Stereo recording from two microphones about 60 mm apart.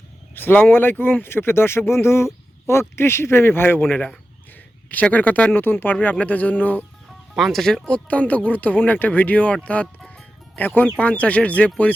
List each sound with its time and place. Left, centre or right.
0.3 s speech: left
7.3 s speech: centre
7.6 s speech: centre
10.8 s speech: left